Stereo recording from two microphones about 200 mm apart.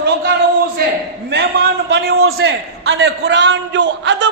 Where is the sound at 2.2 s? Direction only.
75° right (ahead or behind).